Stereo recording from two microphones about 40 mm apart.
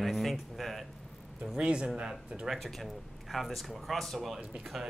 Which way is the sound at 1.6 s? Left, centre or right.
Right.